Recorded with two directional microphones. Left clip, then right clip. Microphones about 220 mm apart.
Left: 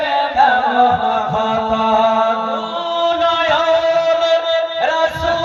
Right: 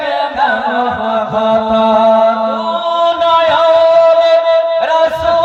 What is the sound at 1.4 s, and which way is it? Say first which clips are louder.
Chant: right 5 dB; 45° right (ahead or behind).